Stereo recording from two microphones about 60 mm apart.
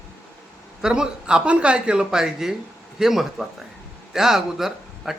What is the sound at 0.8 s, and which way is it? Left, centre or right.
Speech, centre.